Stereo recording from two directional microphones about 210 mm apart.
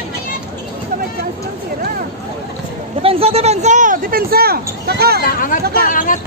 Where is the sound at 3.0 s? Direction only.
30° right (ahead or behind); by 5.2 s 50° right (ahead or behind).